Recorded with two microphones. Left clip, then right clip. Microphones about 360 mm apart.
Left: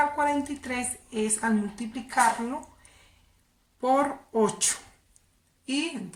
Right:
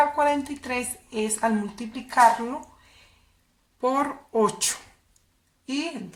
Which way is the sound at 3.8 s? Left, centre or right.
Centre.